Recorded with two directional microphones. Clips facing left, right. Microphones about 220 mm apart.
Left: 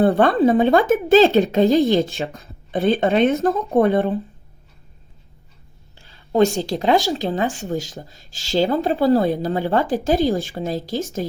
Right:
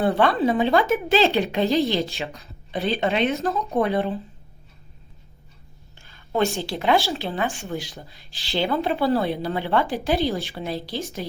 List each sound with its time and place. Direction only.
0.0 s speech: 45° left (ahead or behind)
6.0 s a sound: 35° left (ahead or behind)
7.2 s speech: 40° left (ahead or behind)